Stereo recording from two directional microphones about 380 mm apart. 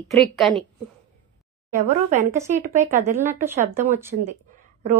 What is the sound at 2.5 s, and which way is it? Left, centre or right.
Speech, centre.